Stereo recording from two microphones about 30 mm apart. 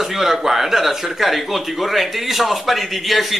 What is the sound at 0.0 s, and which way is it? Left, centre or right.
A man's voice, centre.